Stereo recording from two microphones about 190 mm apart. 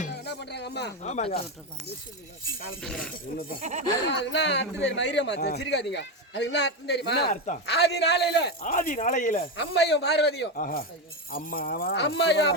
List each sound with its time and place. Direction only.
0.1 s a sound: 60° left (ahead or behind)
1.0 s speech: 35° left (ahead or behind)
2.8 s speech: 5° left (ahead or behind)
3.6 s speech: 40° right (ahead or behind)
4.1 s a man's voice: 70° left (ahead or behind)
8.6 s speech: 45° left (ahead or behind)
9.6 s a man's voice: 60° left (ahead or behind)